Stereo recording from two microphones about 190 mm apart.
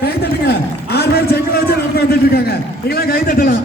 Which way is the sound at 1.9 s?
55° left (ahead or behind).